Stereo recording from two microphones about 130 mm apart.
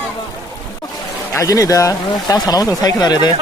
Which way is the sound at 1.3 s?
25° left (ahead or behind).